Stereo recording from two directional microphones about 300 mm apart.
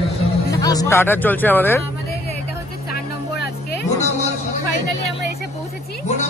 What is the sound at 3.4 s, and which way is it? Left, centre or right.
Vehicle, left.